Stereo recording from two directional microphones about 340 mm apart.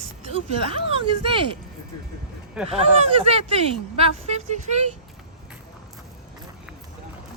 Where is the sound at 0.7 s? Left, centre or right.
Centre.